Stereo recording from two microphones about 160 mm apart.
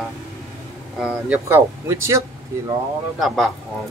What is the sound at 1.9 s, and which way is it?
Speech, 20° right (ahead or behind).